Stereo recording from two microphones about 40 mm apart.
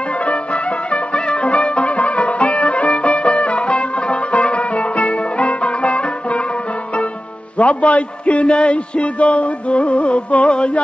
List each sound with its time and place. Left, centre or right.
0.2 s music: left
7.5 s a man's voice: left
8.5 s music: left